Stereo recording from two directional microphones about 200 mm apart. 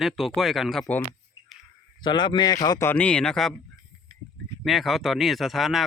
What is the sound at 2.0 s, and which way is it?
A man's voice, 20° left (ahead or behind).